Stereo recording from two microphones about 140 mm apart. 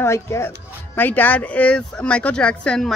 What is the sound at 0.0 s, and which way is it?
Speech, 20° left (ahead or behind).